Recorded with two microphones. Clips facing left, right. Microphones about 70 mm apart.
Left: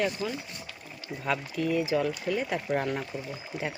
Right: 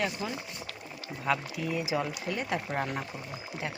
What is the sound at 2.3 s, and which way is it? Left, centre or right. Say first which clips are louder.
Speech: left 4 dB; centre.